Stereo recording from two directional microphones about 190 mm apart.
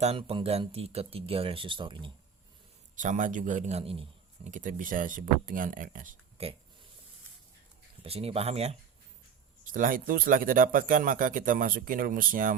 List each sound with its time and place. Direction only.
0.0 s speech: 30° right (ahead or behind)
2.9 s a man's voice: 40° right (ahead or behind)
4.5 s speech: 45° right (ahead or behind)
6.3 s speech: 30° right (ahead or behind)
8.0 s speech: 30° right (ahead or behind)
9.7 s speech: 45° right (ahead or behind)